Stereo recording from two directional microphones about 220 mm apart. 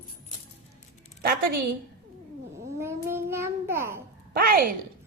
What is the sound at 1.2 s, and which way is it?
Speech, 40° right (ahead or behind).